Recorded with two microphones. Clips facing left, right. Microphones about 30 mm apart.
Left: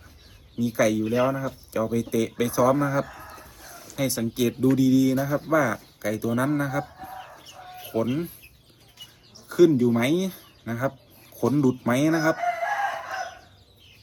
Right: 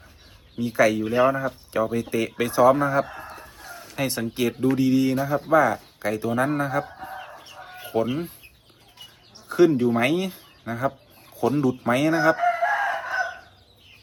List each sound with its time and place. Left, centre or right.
0.6 s speech: right
3.2 s chicken: right
3.9 s speech: right
6.4 s chicken: right
9.6 s speech: right
9.9 s speech: right
11.9 s chicken: right